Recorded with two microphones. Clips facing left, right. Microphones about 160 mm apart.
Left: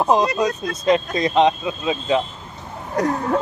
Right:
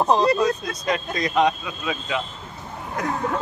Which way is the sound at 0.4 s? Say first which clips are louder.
Left 1 dB; 25° left (ahead or behind).